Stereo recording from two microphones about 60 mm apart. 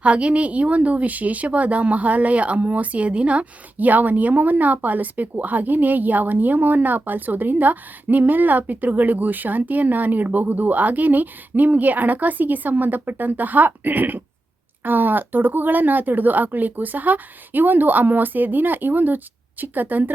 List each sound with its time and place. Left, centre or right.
0.0 s a woman's voice: centre